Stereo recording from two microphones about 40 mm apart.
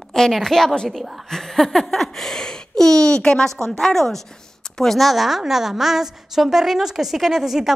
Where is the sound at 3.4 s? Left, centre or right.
Centre.